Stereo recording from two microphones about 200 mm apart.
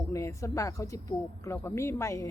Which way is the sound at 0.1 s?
15° left (ahead or behind).